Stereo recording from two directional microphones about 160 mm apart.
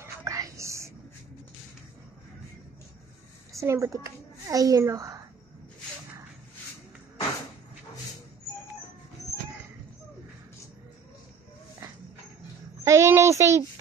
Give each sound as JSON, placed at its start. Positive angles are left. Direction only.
{"t": 0.0, "sound": "whispering", "side_deg": -20}
{"t": 3.5, "sound": "a child's voice", "side_deg": -20}
{"t": 9.2, "sound": "chicken", "side_deg": 20}
{"t": 12.8, "sound": "a sound", "side_deg": -15}